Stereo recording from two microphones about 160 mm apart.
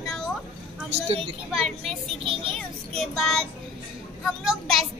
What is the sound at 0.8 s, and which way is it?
Speech, 35° right (ahead or behind).